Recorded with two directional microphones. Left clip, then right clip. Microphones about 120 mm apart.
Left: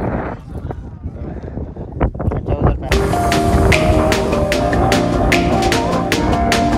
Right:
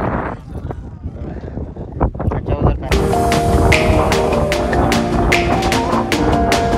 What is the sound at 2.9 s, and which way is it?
Music, centre (ahead or behind).